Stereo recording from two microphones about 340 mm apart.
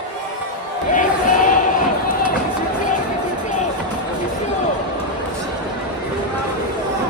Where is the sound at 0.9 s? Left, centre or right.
Left.